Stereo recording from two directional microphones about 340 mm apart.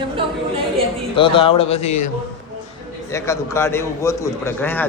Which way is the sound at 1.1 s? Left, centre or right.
Centre.